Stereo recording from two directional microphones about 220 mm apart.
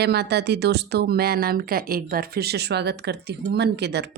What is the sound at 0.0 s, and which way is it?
A woman's voice, 50° right (ahead or behind).